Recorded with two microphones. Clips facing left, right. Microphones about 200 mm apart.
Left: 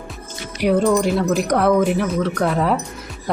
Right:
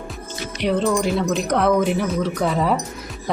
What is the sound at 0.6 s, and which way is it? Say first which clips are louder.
Speech: left 3 dB; 10° left (ahead or behind).